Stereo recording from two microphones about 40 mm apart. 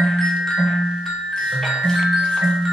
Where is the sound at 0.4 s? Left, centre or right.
Centre.